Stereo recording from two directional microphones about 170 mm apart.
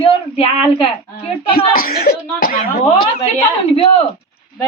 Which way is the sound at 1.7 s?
60° left (ahead or behind).